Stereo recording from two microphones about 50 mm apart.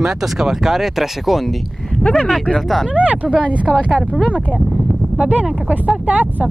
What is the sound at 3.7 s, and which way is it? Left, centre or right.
Speech, centre.